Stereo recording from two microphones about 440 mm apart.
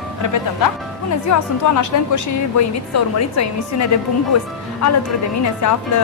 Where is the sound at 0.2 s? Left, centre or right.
Left.